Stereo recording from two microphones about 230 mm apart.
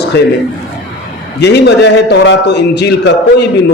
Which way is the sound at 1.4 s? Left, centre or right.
Left.